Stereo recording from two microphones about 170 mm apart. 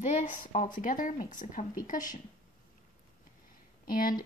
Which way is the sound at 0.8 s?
50° left (ahead or behind).